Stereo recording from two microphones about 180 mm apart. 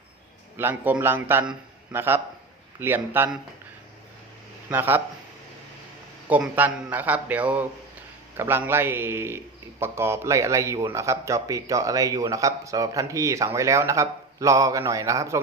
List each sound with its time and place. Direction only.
0.5 s a man's voice: 10° right (ahead or behind)
4.7 s a man's voice: 10° right (ahead or behind)
6.2 s a man's voice: 10° right (ahead or behind)